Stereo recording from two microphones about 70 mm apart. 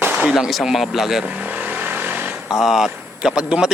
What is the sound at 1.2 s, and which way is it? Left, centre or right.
Vehicle, centre.